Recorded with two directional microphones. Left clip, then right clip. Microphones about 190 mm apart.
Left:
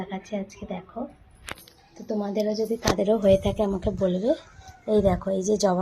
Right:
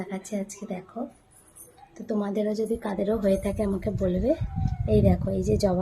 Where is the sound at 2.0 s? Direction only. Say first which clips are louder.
Left 1 dB; 10° right (ahead or behind).